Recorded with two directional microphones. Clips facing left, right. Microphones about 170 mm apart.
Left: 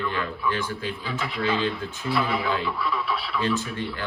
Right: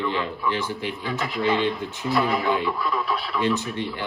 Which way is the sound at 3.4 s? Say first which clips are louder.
Right 3 dB; 20° right (ahead or behind).